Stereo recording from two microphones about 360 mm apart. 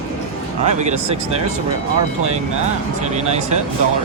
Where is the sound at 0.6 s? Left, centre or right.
Centre.